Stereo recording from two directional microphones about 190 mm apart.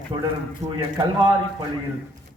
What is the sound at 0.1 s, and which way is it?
Speech, 30° right (ahead or behind).